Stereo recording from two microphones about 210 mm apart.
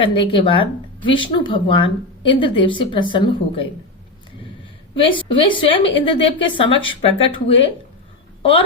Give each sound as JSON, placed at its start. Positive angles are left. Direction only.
{"t": 0.0, "sound": "speech", "side_deg": 25}
{"t": 4.9, "sound": "a woman's voice", "side_deg": 25}